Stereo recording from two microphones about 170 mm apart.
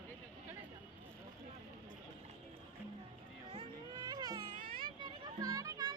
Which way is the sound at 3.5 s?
25° right (ahead or behind).